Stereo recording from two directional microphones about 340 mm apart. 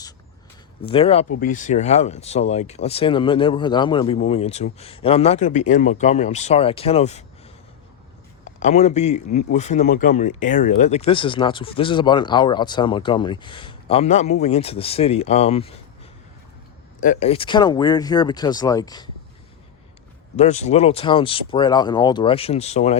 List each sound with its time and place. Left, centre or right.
0.8 s a man's voice: centre
8.4 s a man's voice: left
17.0 s a man's voice: left
20.3 s a man's voice: centre